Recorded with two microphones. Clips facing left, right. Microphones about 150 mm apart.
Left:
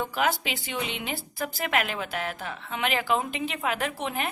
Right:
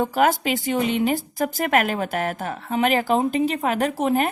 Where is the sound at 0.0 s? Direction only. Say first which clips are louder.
Right 7 dB; 45° right (ahead or behind).